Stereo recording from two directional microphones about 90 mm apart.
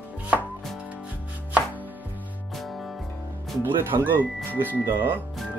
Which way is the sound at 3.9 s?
50° right (ahead or behind).